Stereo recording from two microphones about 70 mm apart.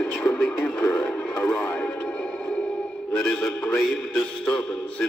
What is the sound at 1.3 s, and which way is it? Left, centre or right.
Music, left.